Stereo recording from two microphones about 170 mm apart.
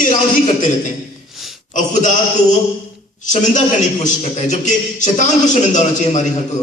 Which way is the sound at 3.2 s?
45° left (ahead or behind).